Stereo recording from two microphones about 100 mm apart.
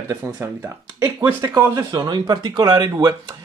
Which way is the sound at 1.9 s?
45° right (ahead or behind).